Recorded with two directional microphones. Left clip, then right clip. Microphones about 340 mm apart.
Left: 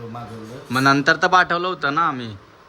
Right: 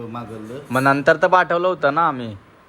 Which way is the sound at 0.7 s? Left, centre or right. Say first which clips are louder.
Right 1 dB; centre.